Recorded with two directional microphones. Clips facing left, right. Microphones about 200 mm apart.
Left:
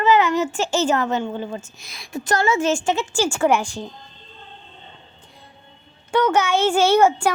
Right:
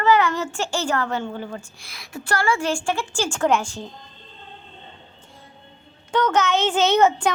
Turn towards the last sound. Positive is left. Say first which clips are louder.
# left 2 dB
turn(degrees=10)  # may be behind; listen again after turning